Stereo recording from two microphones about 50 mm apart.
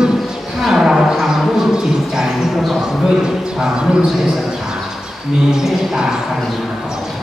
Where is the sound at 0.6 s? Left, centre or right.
Centre.